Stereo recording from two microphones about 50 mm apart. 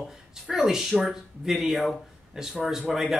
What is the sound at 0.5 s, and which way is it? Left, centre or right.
Speech, centre.